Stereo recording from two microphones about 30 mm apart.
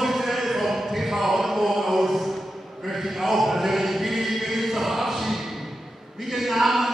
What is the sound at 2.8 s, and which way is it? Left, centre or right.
Chant, centre.